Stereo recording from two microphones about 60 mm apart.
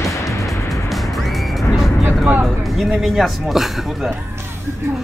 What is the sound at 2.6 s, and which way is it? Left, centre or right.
A man's voice, centre.